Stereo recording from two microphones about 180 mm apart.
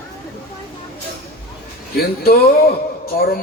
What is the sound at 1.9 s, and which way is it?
Speech, 60° left (ahead or behind).